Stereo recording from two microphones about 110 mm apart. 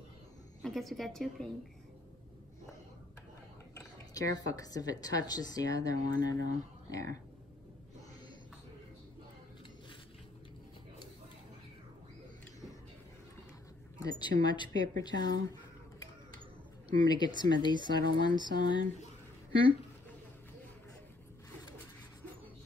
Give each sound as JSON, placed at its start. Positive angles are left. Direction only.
{"t": 0.6, "sound": "a woman's voice", "side_deg": 0}
{"t": 3.7, "sound": "speech", "side_deg": 35}
{"t": 14.0, "sound": "speech", "side_deg": 35}
{"t": 17.0, "sound": "speech", "side_deg": 40}